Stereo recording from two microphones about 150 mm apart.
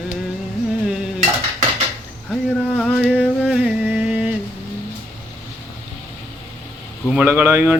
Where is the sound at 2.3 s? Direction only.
5° left (ahead or behind).